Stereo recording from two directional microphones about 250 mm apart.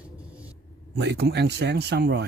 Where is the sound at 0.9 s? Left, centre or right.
Right.